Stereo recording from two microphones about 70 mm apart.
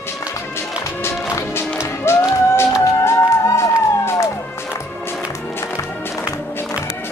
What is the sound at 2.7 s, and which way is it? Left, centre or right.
Music, left.